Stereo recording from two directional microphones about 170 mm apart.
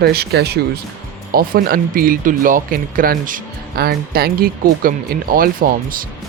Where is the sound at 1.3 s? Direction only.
60° right (ahead or behind).